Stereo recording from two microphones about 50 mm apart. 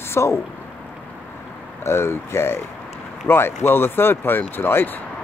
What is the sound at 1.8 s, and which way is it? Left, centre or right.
Speech, left.